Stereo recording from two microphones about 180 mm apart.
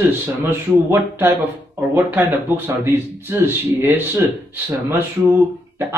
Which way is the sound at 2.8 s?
15° right (ahead or behind).